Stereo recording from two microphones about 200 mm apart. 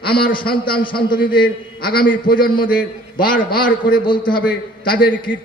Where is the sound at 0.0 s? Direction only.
50° left (ahead or behind).